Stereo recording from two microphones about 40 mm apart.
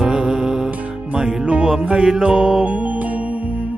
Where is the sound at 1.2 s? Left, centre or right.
Centre.